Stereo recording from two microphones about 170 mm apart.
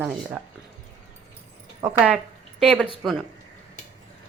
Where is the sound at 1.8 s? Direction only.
5° right (ahead or behind).